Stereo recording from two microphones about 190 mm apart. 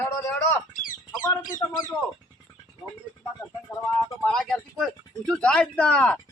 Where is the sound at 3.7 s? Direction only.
15° left (ahead or behind).